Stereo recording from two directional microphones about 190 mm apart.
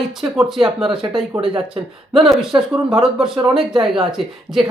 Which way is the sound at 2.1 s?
Centre (ahead or behind).